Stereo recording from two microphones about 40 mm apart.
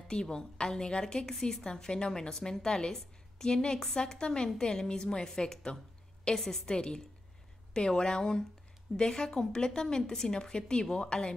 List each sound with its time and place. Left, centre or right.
0.1 s a woman's voice: centre